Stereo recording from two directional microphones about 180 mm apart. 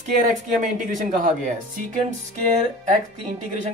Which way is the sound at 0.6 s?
45° right (ahead or behind).